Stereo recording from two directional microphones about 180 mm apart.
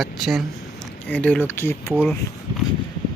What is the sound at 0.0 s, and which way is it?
Speech, centre (ahead or behind).